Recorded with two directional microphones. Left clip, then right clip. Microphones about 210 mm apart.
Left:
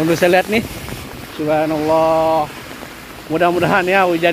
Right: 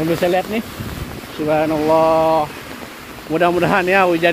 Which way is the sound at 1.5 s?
5° left (ahead or behind).